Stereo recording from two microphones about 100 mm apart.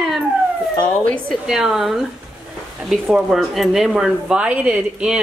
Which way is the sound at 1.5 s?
5° right (ahead or behind).